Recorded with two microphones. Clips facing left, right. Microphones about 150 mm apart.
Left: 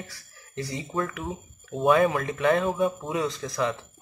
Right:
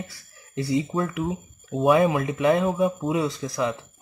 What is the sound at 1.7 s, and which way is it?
Speech, centre (ahead or behind).